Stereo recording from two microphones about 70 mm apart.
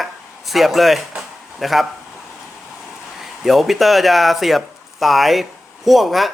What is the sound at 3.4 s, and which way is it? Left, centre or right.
Speech, centre.